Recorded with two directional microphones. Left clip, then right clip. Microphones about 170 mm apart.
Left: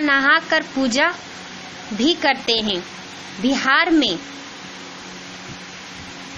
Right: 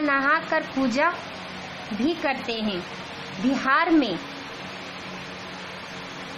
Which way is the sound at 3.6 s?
15° left (ahead or behind).